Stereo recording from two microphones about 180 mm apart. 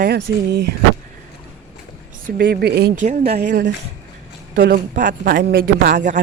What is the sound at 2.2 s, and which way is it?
Speech, 55° right (ahead or behind).